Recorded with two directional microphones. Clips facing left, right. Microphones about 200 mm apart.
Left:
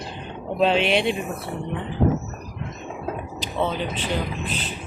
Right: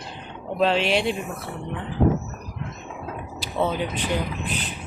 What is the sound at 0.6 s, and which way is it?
Speech, centre (ahead or behind).